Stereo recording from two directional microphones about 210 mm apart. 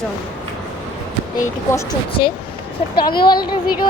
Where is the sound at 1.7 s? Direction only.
20° left (ahead or behind).